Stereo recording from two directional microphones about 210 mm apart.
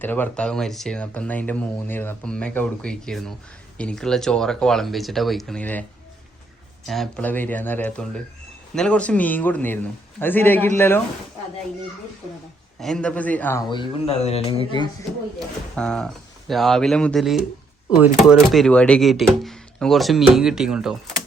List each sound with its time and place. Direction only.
0.0 s speech: 10° left (ahead or behind)
6.8 s a man's voice: centre (ahead or behind)
12.8 s a man's voice: 5° left (ahead or behind)
13.7 s speech: 25° left (ahead or behind)
15.7 s speech: 5° left (ahead or behind)